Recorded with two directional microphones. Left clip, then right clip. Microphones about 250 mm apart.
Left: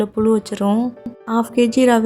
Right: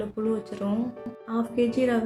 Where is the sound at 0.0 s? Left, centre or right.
Left.